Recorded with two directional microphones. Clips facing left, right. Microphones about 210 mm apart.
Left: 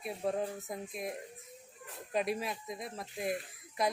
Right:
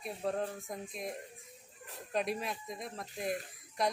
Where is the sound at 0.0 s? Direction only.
5° left (ahead or behind).